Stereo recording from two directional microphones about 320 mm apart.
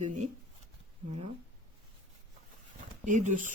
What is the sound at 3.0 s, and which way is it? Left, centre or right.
Speech, right.